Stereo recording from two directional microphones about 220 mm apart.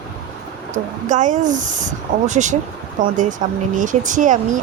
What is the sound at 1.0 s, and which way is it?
Speech, 35° right (ahead or behind).